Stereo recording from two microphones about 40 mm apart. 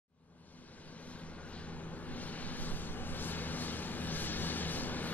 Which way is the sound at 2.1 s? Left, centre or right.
Left.